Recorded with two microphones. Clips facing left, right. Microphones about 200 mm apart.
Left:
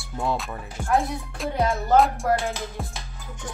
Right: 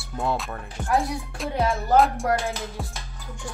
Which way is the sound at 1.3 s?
Centre (ahead or behind).